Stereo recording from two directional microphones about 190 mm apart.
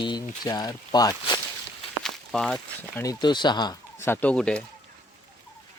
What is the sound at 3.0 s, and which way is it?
Speech, 20° left (ahead or behind).